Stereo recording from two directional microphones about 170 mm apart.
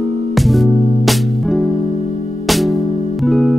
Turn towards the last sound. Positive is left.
turn(degrees=0)  # may be behind; listen again after turning